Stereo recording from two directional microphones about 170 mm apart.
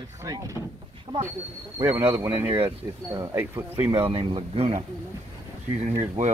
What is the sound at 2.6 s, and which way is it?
Speech, 20° right (ahead or behind).